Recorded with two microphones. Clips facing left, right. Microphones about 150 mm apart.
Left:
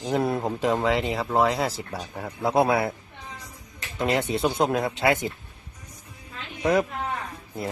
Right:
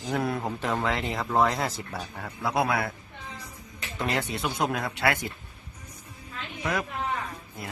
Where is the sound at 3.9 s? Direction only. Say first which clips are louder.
Left 5 dB; 25° left (ahead or behind).